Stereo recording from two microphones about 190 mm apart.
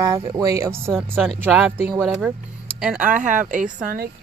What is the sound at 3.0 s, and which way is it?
Speech, 40° right (ahead or behind).